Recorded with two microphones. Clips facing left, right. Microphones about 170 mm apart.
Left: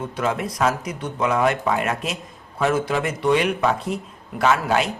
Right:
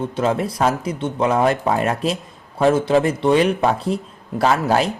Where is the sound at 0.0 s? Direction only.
30° right (ahead or behind).